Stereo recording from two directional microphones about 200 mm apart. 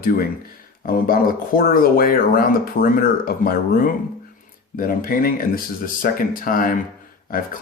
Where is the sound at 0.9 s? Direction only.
45° left (ahead or behind).